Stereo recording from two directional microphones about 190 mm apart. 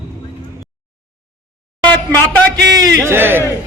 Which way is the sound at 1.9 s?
10° left (ahead or behind).